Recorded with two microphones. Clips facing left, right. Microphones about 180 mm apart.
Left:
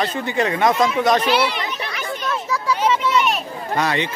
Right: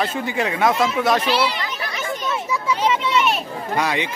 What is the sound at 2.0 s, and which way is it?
Children playing, 20° right (ahead or behind).